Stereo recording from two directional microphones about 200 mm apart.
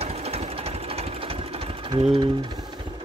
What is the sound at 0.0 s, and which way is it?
Sewing machine, 30° right (ahead or behind).